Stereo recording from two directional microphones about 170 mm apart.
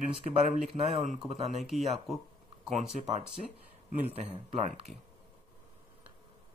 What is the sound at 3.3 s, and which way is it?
Speech, 5° right (ahead or behind).